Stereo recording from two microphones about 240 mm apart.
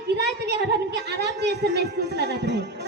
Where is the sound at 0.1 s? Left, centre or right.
Right.